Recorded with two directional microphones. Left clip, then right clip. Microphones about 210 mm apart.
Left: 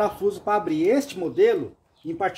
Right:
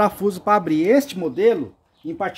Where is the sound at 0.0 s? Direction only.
60° right (ahead or behind).